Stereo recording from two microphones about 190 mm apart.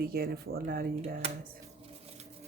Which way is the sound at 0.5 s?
90° right.